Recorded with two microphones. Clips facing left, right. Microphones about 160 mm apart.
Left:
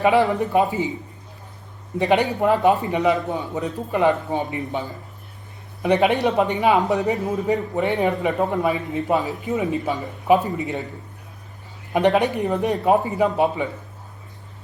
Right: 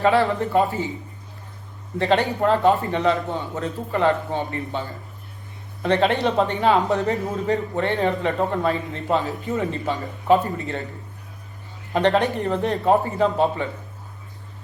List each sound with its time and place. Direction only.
0.0 s a man's voice: 15° left (ahead or behind)
2.0 s a man's voice: 15° left (ahead or behind)
11.9 s a man's voice: 15° left (ahead or behind)